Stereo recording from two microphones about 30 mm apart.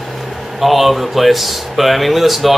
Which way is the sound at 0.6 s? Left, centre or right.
Centre.